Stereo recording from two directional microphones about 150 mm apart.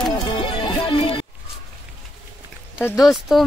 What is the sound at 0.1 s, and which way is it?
Music, 35° left (ahead or behind).